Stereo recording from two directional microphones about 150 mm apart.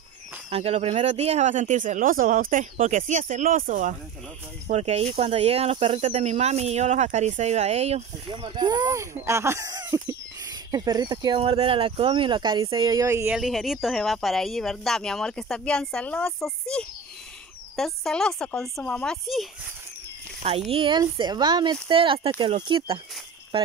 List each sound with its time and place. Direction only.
0.5 s speech: 40° right (ahead or behind); by 3.9 s 60° right (ahead or behind)
4.6 s speech: 45° right (ahead or behind)
8.4 s speech: 30° right (ahead or behind)
13.3 s speech: centre (ahead or behind)
20.4 s speech: 40° right (ahead or behind)